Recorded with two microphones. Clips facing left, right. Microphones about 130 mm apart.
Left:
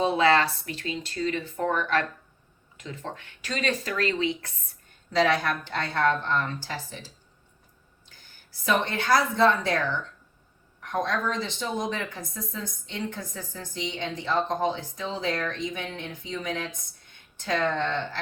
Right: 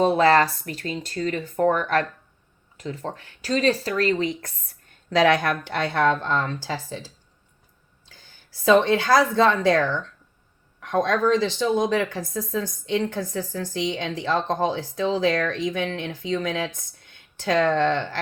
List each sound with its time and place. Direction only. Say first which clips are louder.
0.0 s speech: right 4 dB; 45° right (ahead or behind)
5.2 s speech: right 4 dB; 85° right
8.8 s speech: right 5 dB; 90° right
10.8 s speech: right 6 dB; 90° right